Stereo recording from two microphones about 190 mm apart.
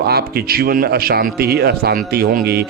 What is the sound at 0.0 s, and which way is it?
A man's voice, 55° right (ahead or behind).